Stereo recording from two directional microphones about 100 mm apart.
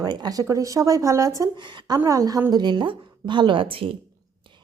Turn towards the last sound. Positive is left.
turn(degrees=-65)  # may be behind; listen again after turning